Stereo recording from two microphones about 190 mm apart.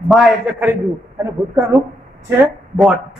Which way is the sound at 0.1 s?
5° right (ahead or behind).